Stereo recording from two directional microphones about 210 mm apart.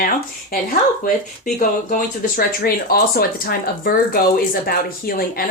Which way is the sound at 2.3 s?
45° left (ahead or behind).